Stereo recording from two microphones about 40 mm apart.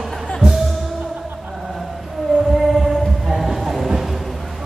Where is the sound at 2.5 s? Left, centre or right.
Centre.